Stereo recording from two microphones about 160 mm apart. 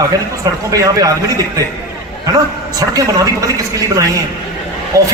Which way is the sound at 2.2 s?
25° right (ahead or behind).